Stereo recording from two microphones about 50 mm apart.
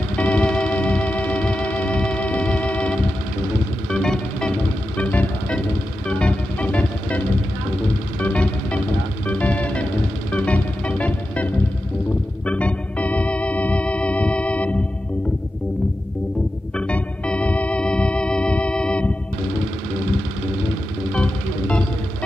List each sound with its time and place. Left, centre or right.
0.2 s music: left
4.9 s music: left
12.4 s organ: left
16.7 s organ: left
21.1 s music: left